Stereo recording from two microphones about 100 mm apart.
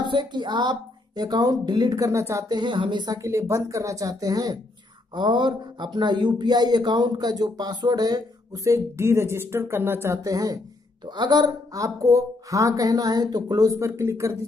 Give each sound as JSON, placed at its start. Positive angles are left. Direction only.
{"t": 0.0, "sound": "speech", "side_deg": -50}
{"t": 2.4, "sound": "speech", "side_deg": -45}
{"t": 3.1, "sound": "speech", "side_deg": -30}
{"t": 5.1, "sound": "speech", "side_deg": -50}
{"t": 8.6, "sound": "speech", "side_deg": -25}
{"t": 11.1, "sound": "speech", "side_deg": -50}